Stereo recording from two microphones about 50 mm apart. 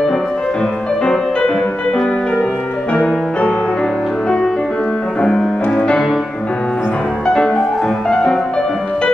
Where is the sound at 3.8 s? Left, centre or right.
Centre.